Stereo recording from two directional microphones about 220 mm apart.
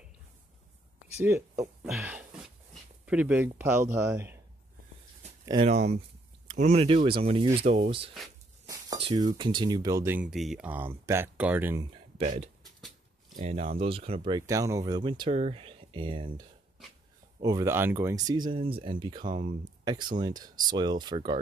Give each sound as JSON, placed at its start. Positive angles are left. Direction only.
{"t": 1.8, "sound": "a sound", "side_deg": 0}
{"t": 3.1, "sound": "speech", "side_deg": -5}
{"t": 5.4, "sound": "a sound", "side_deg": -20}
{"t": 6.4, "sound": "speech", "side_deg": -30}
{"t": 12.2, "sound": "speech", "side_deg": -30}
{"t": 12.6, "sound": "a sound", "side_deg": 0}
{"t": 13.4, "sound": "speech", "side_deg": -35}
{"t": 19.2, "sound": "speech", "side_deg": -35}
{"t": 19.8, "sound": "speech", "side_deg": -20}